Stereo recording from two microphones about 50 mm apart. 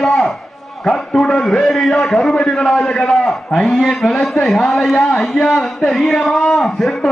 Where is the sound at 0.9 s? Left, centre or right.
Centre.